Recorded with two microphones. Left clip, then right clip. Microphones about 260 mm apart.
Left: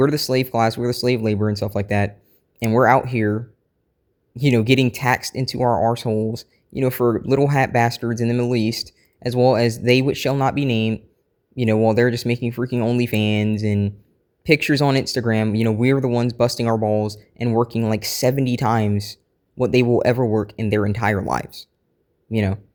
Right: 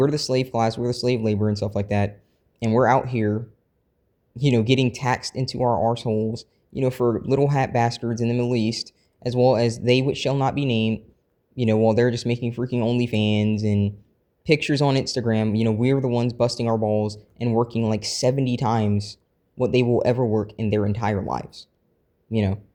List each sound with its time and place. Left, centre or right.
0.0 s speech: left